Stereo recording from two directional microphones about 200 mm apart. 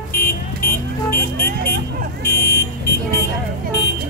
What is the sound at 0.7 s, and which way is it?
Car alarm, 10° left (ahead or behind).